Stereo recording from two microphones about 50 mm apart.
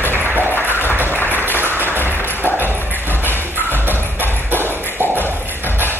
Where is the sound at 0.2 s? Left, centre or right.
Right.